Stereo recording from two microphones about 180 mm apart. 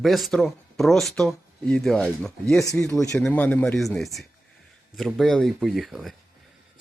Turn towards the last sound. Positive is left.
turn(degrees=0)  # may be behind; listen again after turning